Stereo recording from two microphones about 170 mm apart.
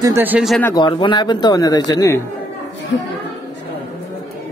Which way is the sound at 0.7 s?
30° left (ahead or behind).